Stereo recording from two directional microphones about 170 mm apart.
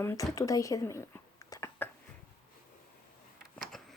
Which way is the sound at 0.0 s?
15° left (ahead or behind).